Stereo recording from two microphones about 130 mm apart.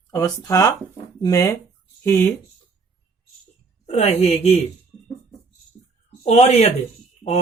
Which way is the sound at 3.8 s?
60° left (ahead or behind).